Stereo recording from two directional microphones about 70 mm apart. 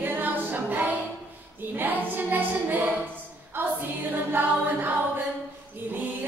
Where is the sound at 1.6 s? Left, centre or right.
Right.